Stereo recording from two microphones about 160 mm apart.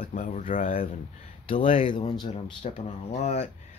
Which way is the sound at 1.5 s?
35° left (ahead or behind).